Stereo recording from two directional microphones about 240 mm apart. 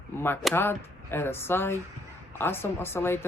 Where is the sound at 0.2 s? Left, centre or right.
Centre.